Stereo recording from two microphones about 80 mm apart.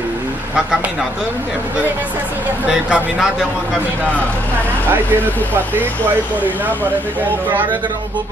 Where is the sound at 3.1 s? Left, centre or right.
Centre.